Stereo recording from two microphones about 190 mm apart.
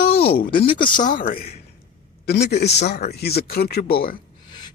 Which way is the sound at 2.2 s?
60° left (ahead or behind).